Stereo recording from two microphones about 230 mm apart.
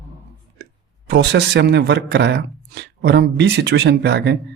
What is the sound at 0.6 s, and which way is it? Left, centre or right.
Speech, right.